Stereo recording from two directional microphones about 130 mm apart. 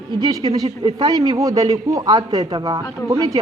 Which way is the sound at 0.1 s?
30° right (ahead or behind).